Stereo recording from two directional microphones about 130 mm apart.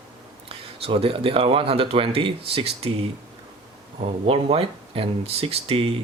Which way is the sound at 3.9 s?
50° right (ahead or behind).